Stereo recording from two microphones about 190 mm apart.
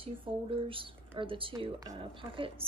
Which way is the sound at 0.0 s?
30° right (ahead or behind).